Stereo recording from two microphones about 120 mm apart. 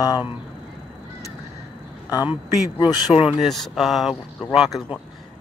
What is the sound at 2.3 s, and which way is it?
Speech, 45° left (ahead or behind).